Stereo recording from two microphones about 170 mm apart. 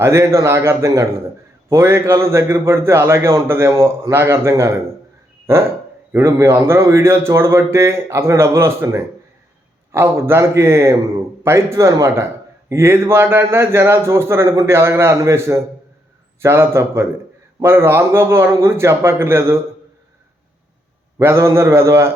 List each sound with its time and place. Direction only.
0.0 s a man's voice: 15° right (ahead or behind)
6.1 s a man's voice: 15° right (ahead or behind)
21.2 s a man's voice: 15° right (ahead or behind)